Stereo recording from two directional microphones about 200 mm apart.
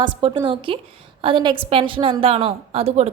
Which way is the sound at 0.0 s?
25° right (ahead or behind).